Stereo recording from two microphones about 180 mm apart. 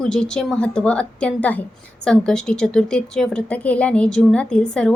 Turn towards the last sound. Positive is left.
turn(degrees=5)  # may be behind; listen again after turning